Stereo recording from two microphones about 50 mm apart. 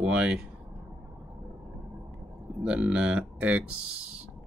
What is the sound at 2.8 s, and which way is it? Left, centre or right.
Speech, centre.